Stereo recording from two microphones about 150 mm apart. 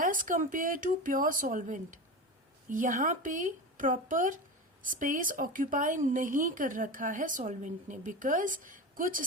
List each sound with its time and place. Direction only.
0.0 s speech: 65° right (ahead or behind)